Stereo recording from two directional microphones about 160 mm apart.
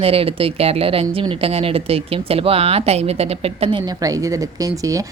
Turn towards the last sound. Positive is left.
turn(degrees=-20)  # may be behind; listen again after turning